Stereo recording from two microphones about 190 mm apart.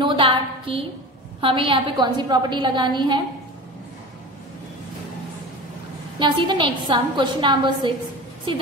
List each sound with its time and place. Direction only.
0.0 s a sound: 30° right (ahead or behind)
1.4 s a woman's voice: 25° right (ahead or behind)
6.1 s a woman's voice: 25° right (ahead or behind)